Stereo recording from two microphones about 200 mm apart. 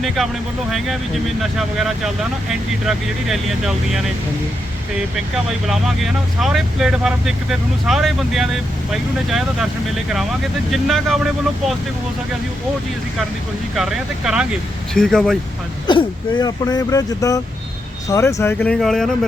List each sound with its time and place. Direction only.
1.4 s speech: centre (ahead or behind)
5.6 s speech: centre (ahead or behind)
13.7 s speech: centre (ahead or behind)
15.9 s speech: 20° left (ahead or behind); by 19.1 s centre (ahead or behind)